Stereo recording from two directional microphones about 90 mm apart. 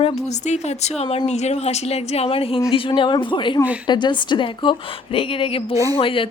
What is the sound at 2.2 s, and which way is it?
Speech, 90° left.